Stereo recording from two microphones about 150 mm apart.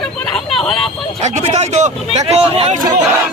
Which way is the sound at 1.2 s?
50° right (ahead or behind).